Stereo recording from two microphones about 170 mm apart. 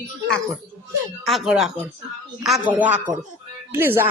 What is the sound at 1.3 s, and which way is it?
A woman's voice, centre (ahead or behind).